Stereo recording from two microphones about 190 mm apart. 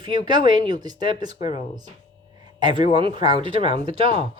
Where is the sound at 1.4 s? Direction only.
35° left (ahead or behind).